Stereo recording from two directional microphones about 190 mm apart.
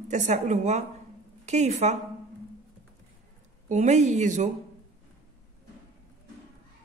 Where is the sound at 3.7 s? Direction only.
40° right (ahead or behind).